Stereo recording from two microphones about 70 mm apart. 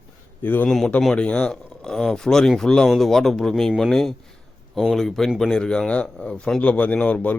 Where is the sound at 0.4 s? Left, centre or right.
Left.